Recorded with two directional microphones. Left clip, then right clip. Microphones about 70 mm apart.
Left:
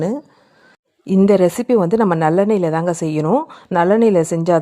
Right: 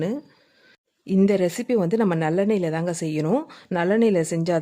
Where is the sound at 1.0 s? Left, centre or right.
Left.